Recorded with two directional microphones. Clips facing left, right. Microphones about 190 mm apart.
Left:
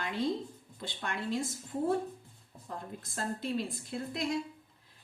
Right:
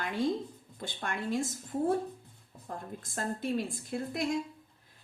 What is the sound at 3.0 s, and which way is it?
Speech, 50° right (ahead or behind).